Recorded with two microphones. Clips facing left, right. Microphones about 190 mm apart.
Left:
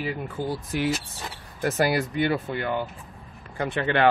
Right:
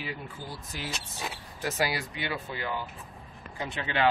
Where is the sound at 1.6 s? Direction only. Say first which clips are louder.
Left 7 dB; 50° left (ahead or behind).